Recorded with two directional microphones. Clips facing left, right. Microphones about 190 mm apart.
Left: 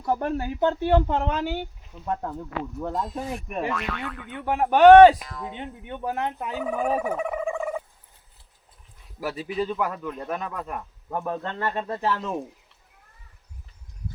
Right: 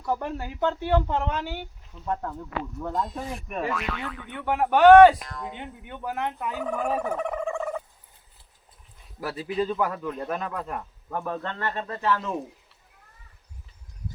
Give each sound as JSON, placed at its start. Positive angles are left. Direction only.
{"t": 0.1, "sound": "speech", "side_deg": 20}
{"t": 2.0, "sound": "speech", "side_deg": 15}
{"t": 2.9, "sound": "speech", "side_deg": 0}
{"t": 4.5, "sound": "speech", "side_deg": 20}
{"t": 5.2, "sound": "speech", "side_deg": 0}
{"t": 5.5, "sound": "speech", "side_deg": 25}
{"t": 6.6, "sound": "a sound", "side_deg": 5}
{"t": 9.3, "sound": "speech", "side_deg": 10}
{"t": 9.7, "sound": "speech", "side_deg": 0}
{"t": 11.9, "sound": "speech", "side_deg": 25}